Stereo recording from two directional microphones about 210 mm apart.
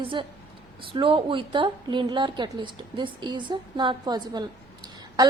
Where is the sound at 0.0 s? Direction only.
25° right (ahead or behind).